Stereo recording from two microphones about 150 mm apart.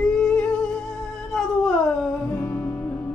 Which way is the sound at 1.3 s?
Centre (ahead or behind).